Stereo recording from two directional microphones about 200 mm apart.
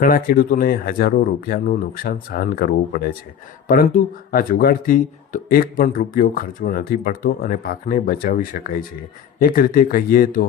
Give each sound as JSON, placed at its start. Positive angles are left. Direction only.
{"t": 0.0, "sound": "speech", "side_deg": 45}